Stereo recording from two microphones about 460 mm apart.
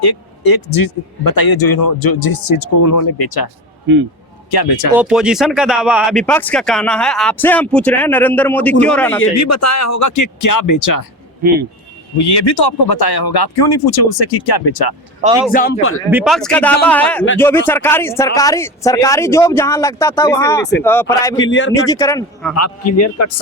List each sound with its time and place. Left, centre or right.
0.0 s speech: left
4.5 s speech: left
4.9 s speech: centre
9.2 s a man's voice: left
12.1 s speech: left
15.5 s speech: left
16.0 s speech: centre
21.4 s speech: left
21.8 s speech: centre
22.9 s a man's voice: left